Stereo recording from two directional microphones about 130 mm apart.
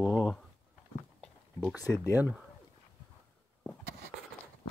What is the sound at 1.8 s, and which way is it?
Speech, 25° left (ahead or behind).